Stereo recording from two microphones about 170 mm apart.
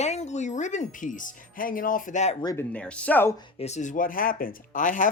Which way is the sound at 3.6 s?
45° left (ahead or behind).